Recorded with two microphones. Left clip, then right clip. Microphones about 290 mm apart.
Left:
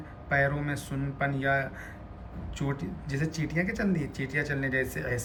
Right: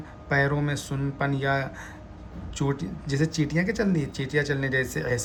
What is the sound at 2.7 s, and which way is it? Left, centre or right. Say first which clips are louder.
Speech: right 4 dB; centre.